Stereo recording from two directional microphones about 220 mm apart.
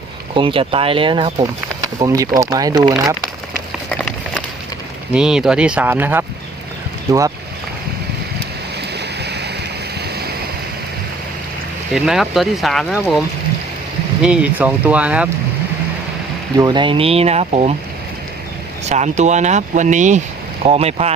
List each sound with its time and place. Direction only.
0.3 s speech: 20° right (ahead or behind)
3.8 s a sound: 5° left (ahead or behind)
5.1 s speech: 5° right (ahead or behind)
9.0 s waterfall: 50° right (ahead or behind)
11.9 s speech: centre (ahead or behind)
16.6 s speech: 20° right (ahead or behind)
18.9 s speech: 30° right (ahead or behind)